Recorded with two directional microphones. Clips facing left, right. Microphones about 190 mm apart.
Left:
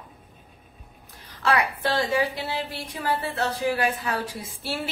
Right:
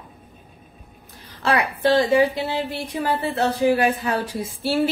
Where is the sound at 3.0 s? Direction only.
20° right (ahead or behind).